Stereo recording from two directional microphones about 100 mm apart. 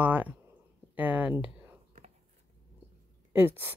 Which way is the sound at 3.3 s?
20° right (ahead or behind).